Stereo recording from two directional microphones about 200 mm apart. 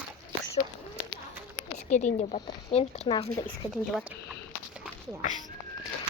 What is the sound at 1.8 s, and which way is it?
Speech, 35° left (ahead or behind).